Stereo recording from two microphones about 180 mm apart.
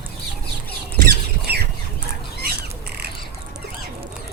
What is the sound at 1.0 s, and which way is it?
Rodents, 60° right (ahead or behind).